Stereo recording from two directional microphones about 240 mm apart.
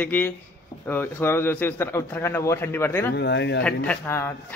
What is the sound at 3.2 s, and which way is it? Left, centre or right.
Speech, left.